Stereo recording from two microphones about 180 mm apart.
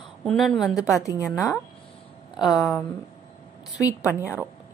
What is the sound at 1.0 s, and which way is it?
Speech, 15° left (ahead or behind).